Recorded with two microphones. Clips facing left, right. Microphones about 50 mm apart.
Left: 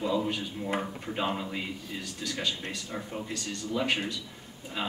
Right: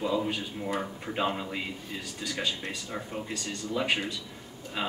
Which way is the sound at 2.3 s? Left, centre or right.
Right.